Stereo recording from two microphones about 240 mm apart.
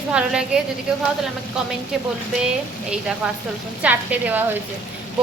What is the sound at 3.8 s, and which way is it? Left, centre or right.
Speech, centre.